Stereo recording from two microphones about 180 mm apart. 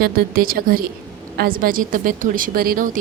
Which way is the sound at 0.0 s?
55° right (ahead or behind).